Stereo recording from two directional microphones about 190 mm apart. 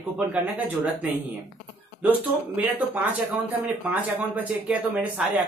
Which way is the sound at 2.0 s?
10° right (ahead or behind).